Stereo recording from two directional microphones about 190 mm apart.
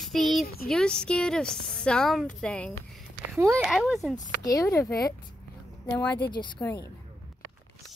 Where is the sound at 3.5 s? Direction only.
Centre (ahead or behind).